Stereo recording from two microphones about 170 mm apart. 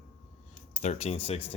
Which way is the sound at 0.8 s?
35° left (ahead or behind).